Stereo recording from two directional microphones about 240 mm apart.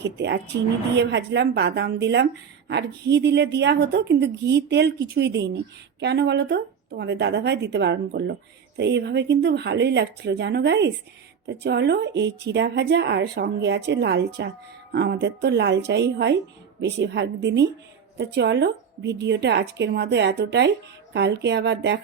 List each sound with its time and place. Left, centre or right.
0.0 s a woman's voice: right